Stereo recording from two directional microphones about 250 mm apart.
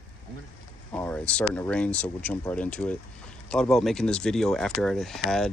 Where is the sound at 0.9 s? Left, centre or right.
Centre.